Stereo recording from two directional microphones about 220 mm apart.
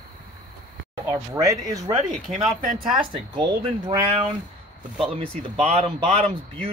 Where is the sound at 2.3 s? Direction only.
35° right (ahead or behind).